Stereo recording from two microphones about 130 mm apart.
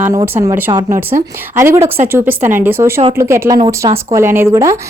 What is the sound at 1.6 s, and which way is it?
Speech, 20° right (ahead or behind).